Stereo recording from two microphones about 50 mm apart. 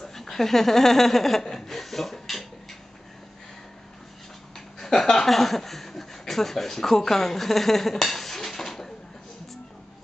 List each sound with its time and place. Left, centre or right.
0.0 s speech: centre
4.6 s speech: centre